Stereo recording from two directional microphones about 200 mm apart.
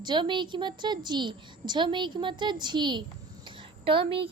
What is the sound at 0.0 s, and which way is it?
A woman's voice, 20° right (ahead or behind).